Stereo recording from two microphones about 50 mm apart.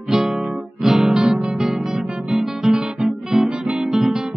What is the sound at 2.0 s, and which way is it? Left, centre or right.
Music, centre.